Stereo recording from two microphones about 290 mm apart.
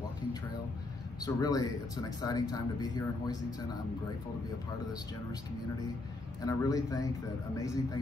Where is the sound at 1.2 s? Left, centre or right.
Centre.